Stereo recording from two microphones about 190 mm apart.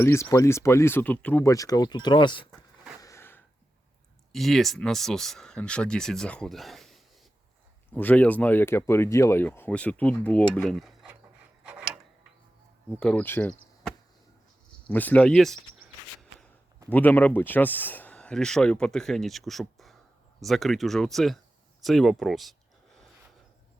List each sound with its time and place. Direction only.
0.0 s speech: 15° left (ahead or behind)
3.0 s a sound: 15° left (ahead or behind)
4.3 s speech: centre (ahead or behind)
11.6 s mechanisms: 5° right (ahead or behind)
13.0 s speech: 5° left (ahead or behind)
14.8 s speech: 10° left (ahead or behind)
16.9 s speech: 10° left (ahead or behind)
21.8 s a sound: centre (ahead or behind)